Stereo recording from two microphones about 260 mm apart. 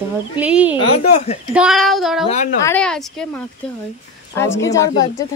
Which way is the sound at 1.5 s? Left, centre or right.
Centre.